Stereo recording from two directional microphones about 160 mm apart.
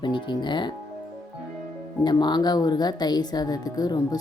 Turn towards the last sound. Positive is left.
turn(degrees=25)  # may be behind; listen again after turning